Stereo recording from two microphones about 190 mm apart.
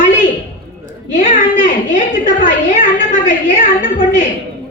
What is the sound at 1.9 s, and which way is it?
A woman's voice, 40° left (ahead or behind).